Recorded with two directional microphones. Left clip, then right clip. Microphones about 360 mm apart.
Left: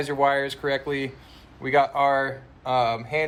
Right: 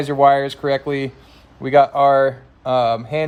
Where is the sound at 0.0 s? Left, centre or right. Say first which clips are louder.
Right 8 dB; right.